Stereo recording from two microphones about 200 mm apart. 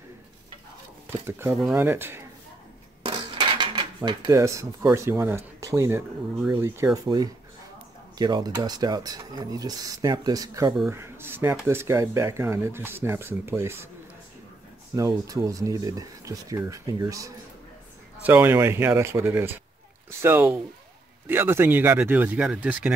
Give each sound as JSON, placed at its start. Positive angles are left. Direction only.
{"t": 1.1, "sound": "speech", "side_deg": -15}
{"t": 3.0, "sound": "dishes", "side_deg": -25}
{"t": 4.9, "sound": "speech", "side_deg": -15}
{"t": 8.2, "sound": "speech", "side_deg": -20}
{"t": 15.0, "sound": "speech", "side_deg": -20}